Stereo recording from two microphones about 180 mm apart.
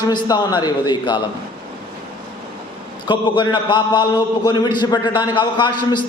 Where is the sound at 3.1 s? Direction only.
25° left (ahead or behind).